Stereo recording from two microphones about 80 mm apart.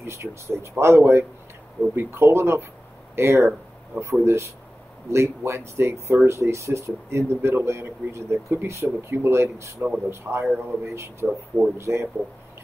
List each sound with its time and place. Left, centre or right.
0.0 s speech: right
11.2 s speech: centre
11.8 s speech: right